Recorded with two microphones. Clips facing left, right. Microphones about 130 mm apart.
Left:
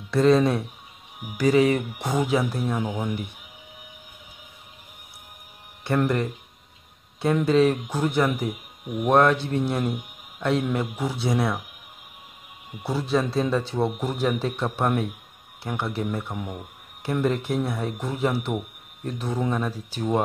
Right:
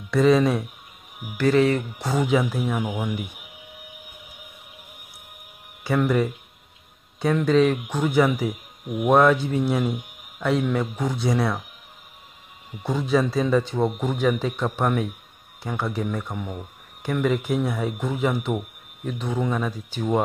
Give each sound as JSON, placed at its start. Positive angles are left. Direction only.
{"t": 0.1, "sound": "speech", "side_deg": 0}
{"t": 1.4, "sound": "speech", "side_deg": 10}
{"t": 2.2, "sound": "speech", "side_deg": 0}
{"t": 5.9, "sound": "speech", "side_deg": 0}
{"t": 12.8, "sound": "speech", "side_deg": 5}